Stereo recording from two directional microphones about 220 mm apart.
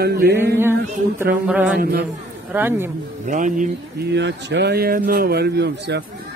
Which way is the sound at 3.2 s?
35° right (ahead or behind).